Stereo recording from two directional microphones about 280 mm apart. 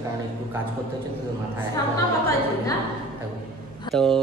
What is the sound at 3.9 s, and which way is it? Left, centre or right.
Speech, centre.